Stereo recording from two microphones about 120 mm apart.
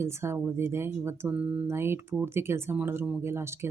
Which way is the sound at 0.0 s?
20° right (ahead or behind).